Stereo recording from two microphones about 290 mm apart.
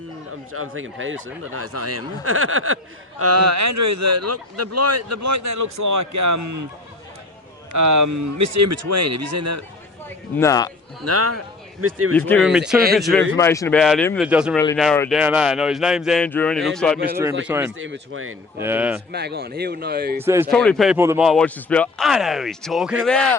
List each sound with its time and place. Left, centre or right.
0.5 s speech: right
3.2 s a man's voice: right
7.7 s speech: right
10.3 s a man's voice: centre
11.0 s speech: right
12.1 s a man's voice: centre
13.3 s a man's voice: centre
17.4 s speech: centre
17.7 s speech: right
18.6 s speech: centre
19.1 s speech: right
20.1 s speech: centre
20.5 s speech: centre